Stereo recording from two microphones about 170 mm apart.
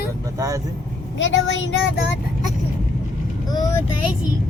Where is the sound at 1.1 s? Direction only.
90° left.